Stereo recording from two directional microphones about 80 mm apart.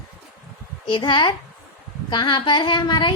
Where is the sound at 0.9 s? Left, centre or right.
Left.